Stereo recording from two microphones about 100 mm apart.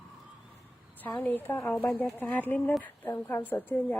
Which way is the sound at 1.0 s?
15° left (ahead or behind).